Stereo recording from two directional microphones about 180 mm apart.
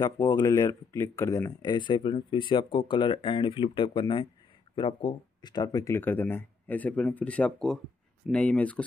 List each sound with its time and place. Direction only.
0.0 s speech: 20° left (ahead or behind)